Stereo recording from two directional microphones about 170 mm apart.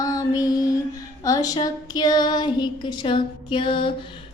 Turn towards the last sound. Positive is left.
turn(degrees=30)  # may be behind; listen again after turning